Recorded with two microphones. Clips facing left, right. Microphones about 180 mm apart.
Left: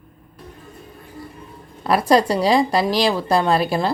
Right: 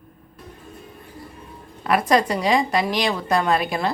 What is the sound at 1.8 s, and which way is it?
A woman's voice, 35° left (ahead or behind).